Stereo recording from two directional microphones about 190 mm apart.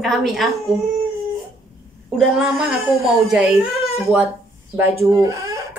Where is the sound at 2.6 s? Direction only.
Centre (ahead or behind).